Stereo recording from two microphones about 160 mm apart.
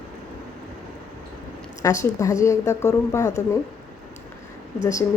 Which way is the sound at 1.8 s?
20° left (ahead or behind).